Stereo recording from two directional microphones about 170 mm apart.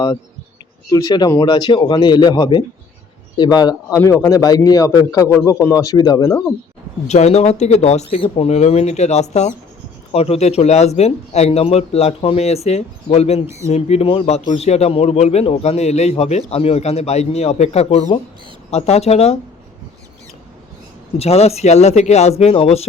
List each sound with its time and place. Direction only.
0.9 s speech: 20° left (ahead or behind)
7.1 s speech: 40° left (ahead or behind)
21.2 s speech: 35° left (ahead or behind)